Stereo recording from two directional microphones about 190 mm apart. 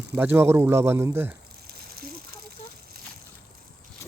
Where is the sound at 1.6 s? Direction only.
55° right (ahead or behind).